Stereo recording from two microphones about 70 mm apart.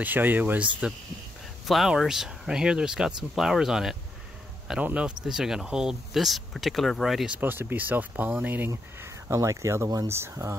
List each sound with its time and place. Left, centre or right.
0.0 s speech: right
1.7 s speech: centre
4.8 s speech: centre
5.2 s speech: centre
7.3 s speech: right
9.0 s speech: right